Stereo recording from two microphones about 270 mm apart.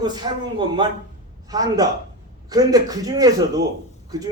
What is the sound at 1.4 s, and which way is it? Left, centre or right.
Speech, centre.